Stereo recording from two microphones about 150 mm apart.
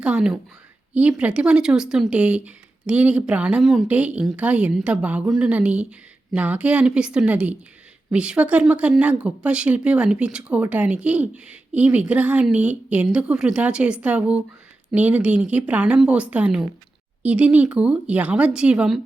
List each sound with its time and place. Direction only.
0.0 s a woman's voice: 5° right (ahead or behind)